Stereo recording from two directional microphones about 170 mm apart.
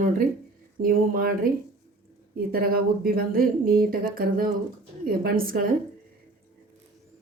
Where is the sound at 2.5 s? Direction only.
60° right (ahead or behind).